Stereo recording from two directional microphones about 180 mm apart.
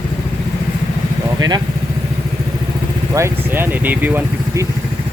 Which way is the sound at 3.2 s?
10° right (ahead or behind).